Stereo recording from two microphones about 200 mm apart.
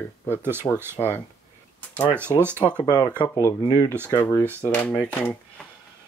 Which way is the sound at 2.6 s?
10° left (ahead or behind).